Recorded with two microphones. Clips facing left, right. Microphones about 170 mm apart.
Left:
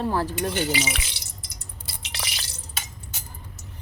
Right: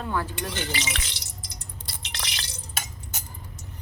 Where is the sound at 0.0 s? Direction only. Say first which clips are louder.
Left 5 dB; 35° left (ahead or behind).